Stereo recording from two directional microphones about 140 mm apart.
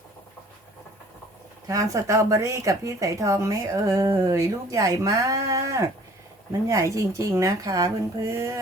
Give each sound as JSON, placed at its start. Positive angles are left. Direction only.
{"t": 1.6, "sound": "speech", "side_deg": -25}